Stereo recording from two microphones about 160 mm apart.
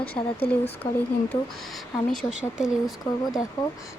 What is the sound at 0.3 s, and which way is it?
Speech, 35° left (ahead or behind).